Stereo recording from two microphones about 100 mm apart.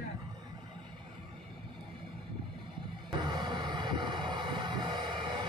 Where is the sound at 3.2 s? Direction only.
50° right (ahead or behind).